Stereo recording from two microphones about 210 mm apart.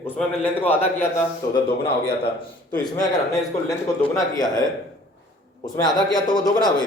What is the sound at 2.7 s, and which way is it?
A man's voice, 20° left (ahead or behind).